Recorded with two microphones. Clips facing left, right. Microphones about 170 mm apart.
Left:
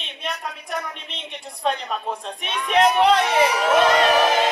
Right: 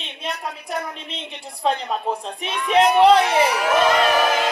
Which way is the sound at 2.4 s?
5° right (ahead or behind).